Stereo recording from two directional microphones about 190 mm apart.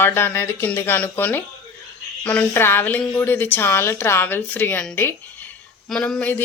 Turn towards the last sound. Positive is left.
turn(degrees=5)  # may be behind; listen again after turning